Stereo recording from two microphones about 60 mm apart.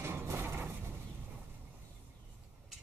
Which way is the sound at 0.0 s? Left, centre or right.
Right.